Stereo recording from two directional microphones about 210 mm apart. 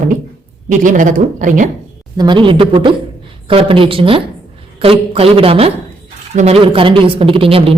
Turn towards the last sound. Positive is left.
turn(degrees=-25)  # may be behind; listen again after turning